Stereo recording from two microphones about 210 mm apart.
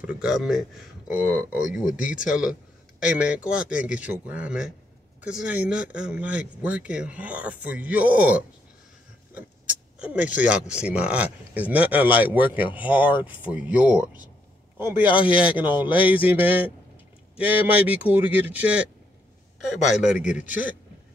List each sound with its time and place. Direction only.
0.0 s speech: 5° right (ahead or behind)
15.1 s speech: 25° left (ahead or behind)
15.4 s speech: 5° right (ahead or behind)
20.0 s speech: 5° right (ahead or behind)